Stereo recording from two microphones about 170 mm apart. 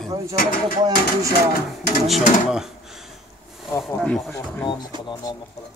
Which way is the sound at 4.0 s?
Centre (ahead or behind).